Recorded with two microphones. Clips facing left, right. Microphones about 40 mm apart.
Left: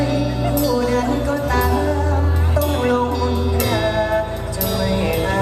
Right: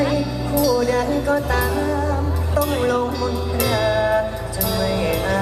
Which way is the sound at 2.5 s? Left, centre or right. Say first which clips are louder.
Left 1 dB; centre.